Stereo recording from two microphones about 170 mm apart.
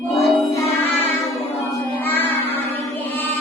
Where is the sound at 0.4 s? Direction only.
15° left (ahead or behind).